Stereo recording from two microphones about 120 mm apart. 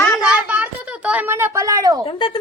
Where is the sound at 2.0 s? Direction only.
45° left (ahead or behind).